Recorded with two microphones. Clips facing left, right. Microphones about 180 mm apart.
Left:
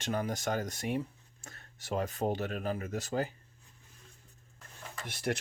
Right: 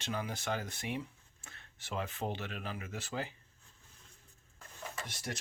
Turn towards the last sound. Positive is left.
turn(degrees=60)  # may be behind; listen again after turning